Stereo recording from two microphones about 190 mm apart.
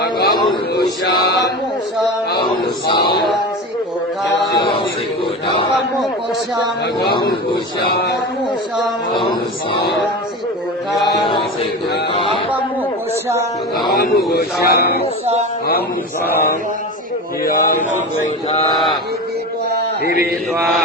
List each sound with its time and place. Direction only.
0.0 s a sound: 55° left (ahead or behind)
1.2 s speech: 60° left (ahead or behind)
4.5 s mantra: 25° left (ahead or behind)
12.1 s speech: 30° left (ahead or behind)
13.9 s speech: 55° left (ahead or behind)
17.4 s speech: 45° left (ahead or behind)